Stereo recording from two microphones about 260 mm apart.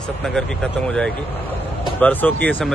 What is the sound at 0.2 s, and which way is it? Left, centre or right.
Speech, centre.